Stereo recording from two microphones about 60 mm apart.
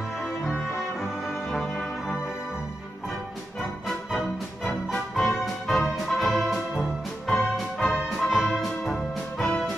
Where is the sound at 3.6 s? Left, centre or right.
Centre.